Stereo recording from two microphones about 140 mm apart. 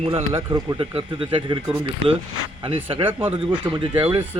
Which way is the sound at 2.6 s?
40° right (ahead or behind).